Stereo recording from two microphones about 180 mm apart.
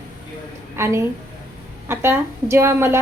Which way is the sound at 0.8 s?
15° right (ahead or behind).